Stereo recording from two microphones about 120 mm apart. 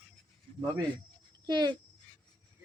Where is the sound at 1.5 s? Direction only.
35° right (ahead or behind).